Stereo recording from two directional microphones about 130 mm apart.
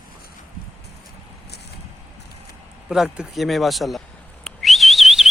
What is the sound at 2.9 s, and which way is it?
Speech, 5° right (ahead or behind).